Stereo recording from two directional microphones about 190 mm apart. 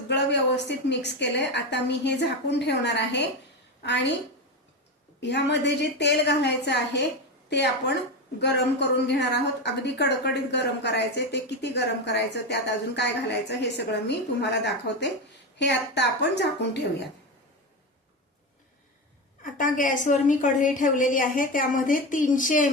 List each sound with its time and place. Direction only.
0.1 s a woman's voice: 65° left (ahead or behind)
5.2 s a woman's voice: 65° left (ahead or behind)
15.5 s a woman's voice: 65° left (ahead or behind)
19.4 s a woman's voice: 45° left (ahead or behind)